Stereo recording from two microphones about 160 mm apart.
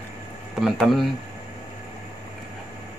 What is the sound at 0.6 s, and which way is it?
Speech, centre (ahead or behind).